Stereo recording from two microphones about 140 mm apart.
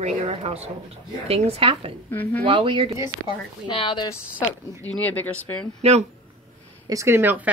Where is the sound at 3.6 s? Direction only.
35° left (ahead or behind).